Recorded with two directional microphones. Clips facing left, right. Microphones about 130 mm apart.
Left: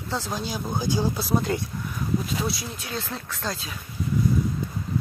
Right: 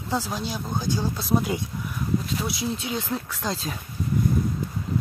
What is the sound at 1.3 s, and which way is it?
Speech, 10° right (ahead or behind).